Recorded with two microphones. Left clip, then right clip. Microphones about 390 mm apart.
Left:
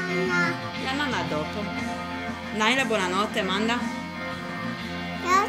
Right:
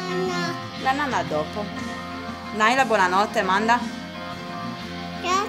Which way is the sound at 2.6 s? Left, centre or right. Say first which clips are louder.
Right 5 dB; right.